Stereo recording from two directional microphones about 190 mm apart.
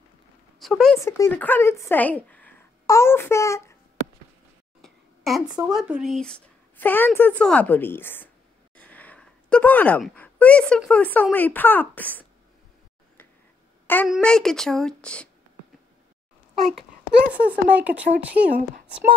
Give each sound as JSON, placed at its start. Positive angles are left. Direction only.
{"t": 0.6, "sound": "speech", "side_deg": 0}
{"t": 0.9, "sound": "speech", "side_deg": 15}
{"t": 4.8, "sound": "a sound", "side_deg": 0}
{"t": 5.5, "sound": "speech", "side_deg": -20}
{"t": 5.8, "sound": "a woman's voice", "side_deg": 0}
{"t": 14.0, "sound": "speech", "side_deg": 0}
{"t": 17.3, "sound": "speech", "side_deg": -5}